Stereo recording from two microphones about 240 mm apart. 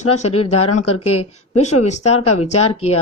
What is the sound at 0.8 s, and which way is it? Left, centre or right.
Speech, left.